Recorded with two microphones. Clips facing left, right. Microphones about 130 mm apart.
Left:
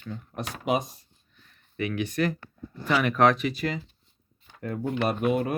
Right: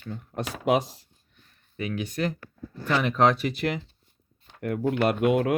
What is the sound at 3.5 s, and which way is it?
Speech, 65° right (ahead or behind).